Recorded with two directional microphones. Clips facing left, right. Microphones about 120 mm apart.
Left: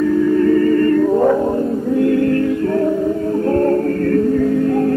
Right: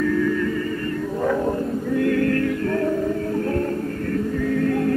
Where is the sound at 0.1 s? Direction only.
30° left (ahead or behind).